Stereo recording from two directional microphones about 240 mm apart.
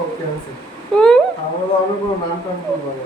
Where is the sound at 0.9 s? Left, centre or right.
Centre.